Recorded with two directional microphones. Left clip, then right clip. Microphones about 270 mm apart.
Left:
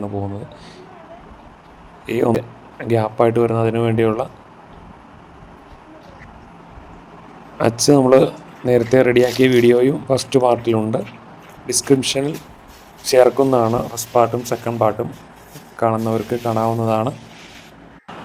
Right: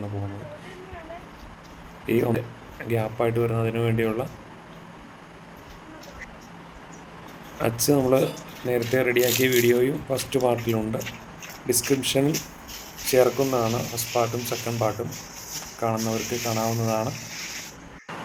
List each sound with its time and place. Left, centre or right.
2.0 s speech: left
7.6 s speech: left